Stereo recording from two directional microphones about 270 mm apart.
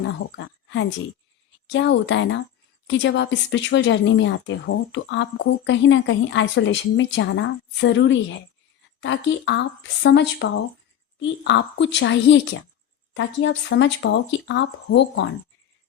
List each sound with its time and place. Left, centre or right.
0.0 s a woman's voice: left